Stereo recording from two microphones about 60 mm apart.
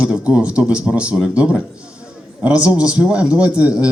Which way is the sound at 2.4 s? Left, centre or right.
Right.